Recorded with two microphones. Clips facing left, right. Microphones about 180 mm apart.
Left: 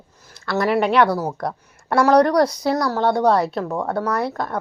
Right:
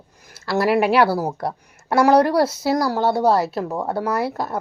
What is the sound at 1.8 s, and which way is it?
A woman's voice, 5° right (ahead or behind).